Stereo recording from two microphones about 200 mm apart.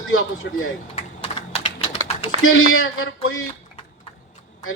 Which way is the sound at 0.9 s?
30° left (ahead or behind).